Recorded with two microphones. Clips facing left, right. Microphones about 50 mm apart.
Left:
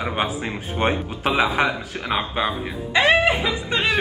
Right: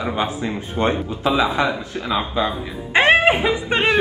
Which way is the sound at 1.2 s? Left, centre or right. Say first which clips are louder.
Right 1 dB; left.